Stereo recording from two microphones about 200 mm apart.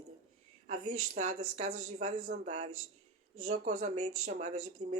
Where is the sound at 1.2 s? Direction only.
35° right (ahead or behind).